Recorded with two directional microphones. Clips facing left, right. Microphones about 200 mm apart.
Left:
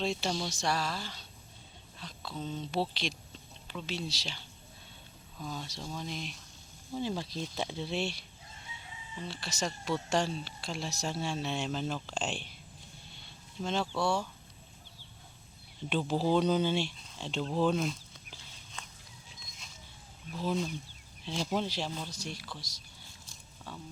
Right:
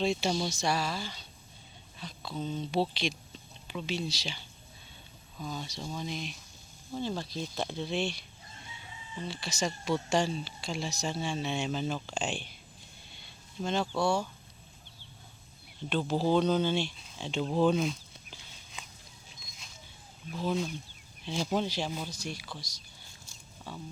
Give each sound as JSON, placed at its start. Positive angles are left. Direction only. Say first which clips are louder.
{"t": 0.0, "sound": "speech", "louder": "right 4 dB", "side_deg": 0}
{"t": 9.2, "sound": "speech", "louder": "right 3 dB", "side_deg": 0}
{"t": 13.6, "sound": "speech", "louder": "right 2 dB", "side_deg": 0}
{"t": 15.9, "sound": "speech", "louder": "right 1 dB", "side_deg": 10}
{"t": 17.2, "sound": "a sound", "louder": "right 3 dB", "side_deg": -5}
{"t": 20.3, "sound": "speech", "louder": "right 1 dB", "side_deg": 0}
{"t": 21.8, "sound": "a sound", "louder": "right 2 dB", "side_deg": -10}